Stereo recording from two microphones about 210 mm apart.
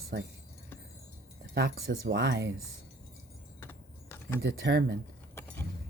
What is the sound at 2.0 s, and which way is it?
Speech, 60° right (ahead or behind).